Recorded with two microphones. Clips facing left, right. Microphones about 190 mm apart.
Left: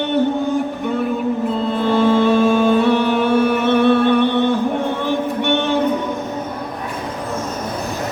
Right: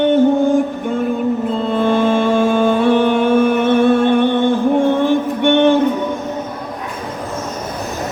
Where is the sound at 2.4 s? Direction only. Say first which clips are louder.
Even; 50° right (ahead or behind).